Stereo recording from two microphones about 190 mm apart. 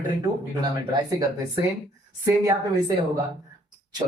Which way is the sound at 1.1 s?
15° right (ahead or behind).